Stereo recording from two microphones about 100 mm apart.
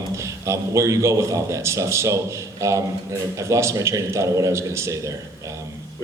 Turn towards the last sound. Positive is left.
turn(degrees=-30)  # may be behind; listen again after turning